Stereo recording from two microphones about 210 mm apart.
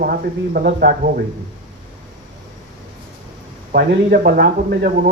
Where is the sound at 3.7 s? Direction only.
45° right (ahead or behind).